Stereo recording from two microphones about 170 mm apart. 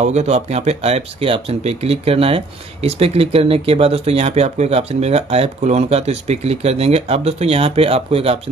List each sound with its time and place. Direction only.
0.0 s speech: 40° right (ahead or behind)